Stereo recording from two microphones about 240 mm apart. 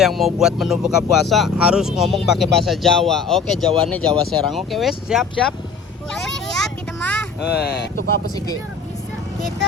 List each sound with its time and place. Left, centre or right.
0.0 s speech: centre
6.1 s child singing: centre
7.4 s speech: left